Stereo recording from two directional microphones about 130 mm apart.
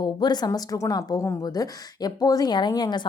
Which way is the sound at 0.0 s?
35° left (ahead or behind).